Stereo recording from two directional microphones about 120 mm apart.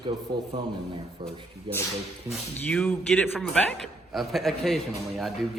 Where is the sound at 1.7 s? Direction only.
45° right (ahead or behind).